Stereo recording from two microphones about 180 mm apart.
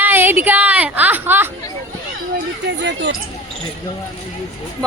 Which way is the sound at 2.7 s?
75° right (ahead or behind).